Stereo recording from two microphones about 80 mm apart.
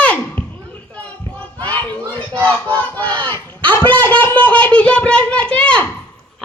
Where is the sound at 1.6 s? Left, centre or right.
Left.